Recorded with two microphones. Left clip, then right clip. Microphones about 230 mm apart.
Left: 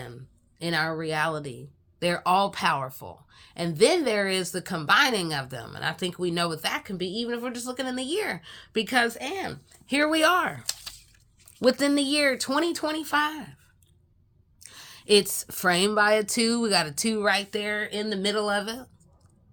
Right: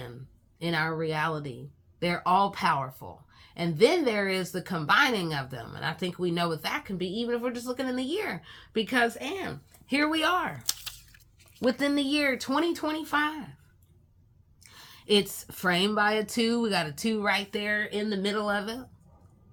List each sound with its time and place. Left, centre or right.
0.6 s speech: left
10.7 s a sound: centre
11.6 s speech: left
14.6 s speech: left